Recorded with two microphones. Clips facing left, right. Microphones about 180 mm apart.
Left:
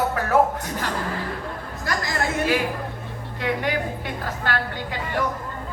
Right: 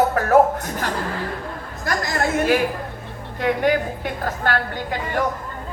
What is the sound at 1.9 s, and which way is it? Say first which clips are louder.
Speech: right 3 dB; 50° right (ahead or behind).